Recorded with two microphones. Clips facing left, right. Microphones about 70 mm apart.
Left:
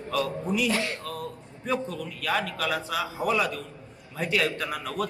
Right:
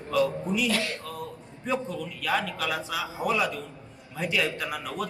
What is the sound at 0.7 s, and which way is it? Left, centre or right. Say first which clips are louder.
Speech: left 1 dB; left.